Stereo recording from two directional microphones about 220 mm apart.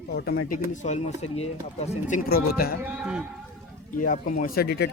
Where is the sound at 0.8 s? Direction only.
30° left (ahead or behind).